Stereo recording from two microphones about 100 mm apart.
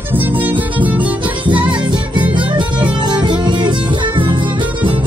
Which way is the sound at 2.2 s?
50° right (ahead or behind).